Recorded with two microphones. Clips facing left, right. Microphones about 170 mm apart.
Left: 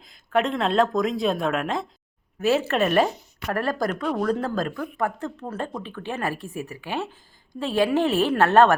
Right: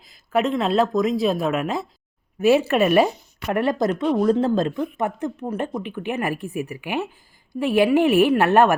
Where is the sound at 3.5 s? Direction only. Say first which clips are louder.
Right 5 dB; 20° right (ahead or behind).